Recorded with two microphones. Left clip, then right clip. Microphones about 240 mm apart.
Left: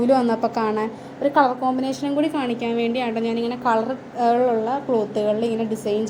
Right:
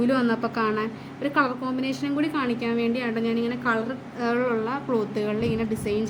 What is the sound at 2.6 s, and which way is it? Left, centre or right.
A woman's voice, centre.